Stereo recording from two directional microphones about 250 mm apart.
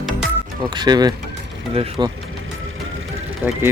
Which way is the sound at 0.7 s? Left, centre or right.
Centre.